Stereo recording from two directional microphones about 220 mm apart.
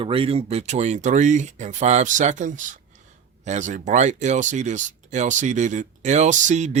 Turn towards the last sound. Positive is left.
turn(degrees=-30)  # may be behind; listen again after turning